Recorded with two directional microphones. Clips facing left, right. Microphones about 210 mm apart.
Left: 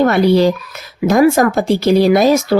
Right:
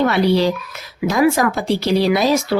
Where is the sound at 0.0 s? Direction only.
45° left (ahead or behind).